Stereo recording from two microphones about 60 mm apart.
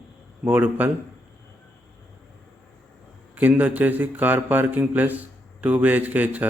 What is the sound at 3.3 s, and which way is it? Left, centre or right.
A man's voice, right.